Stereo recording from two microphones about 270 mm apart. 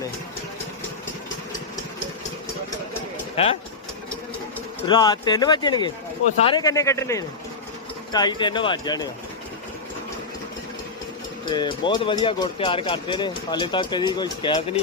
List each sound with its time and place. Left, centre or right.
3.3 s speech: left
4.9 s speech: centre
11.4 s speech: centre